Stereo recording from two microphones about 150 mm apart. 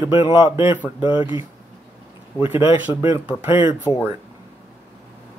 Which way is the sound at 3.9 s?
30° left (ahead or behind).